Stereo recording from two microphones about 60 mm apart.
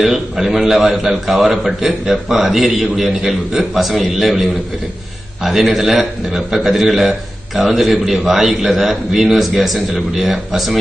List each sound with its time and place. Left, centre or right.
0.0 s a man's voice: centre